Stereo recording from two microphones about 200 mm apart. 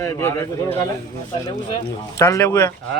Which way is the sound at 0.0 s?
10° left (ahead or behind).